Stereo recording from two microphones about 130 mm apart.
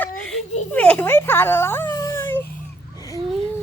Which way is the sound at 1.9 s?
25° left (ahead or behind).